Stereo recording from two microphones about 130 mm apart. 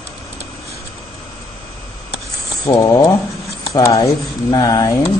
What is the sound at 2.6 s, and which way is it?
Speech, 25° left (ahead or behind).